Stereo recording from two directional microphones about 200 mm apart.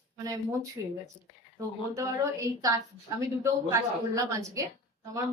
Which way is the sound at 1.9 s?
15° right (ahead or behind).